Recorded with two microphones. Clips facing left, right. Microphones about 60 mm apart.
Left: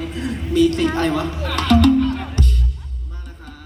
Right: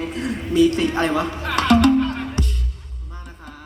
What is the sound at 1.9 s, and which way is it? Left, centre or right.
Music, centre.